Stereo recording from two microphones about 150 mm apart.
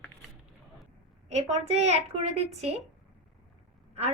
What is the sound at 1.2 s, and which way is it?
A woman's voice, 45° right (ahead or behind).